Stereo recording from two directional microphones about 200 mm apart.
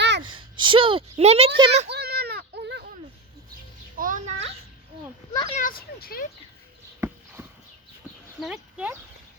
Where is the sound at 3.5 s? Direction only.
45° right (ahead or behind).